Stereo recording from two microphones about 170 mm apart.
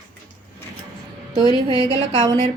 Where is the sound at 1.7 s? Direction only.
30° right (ahead or behind).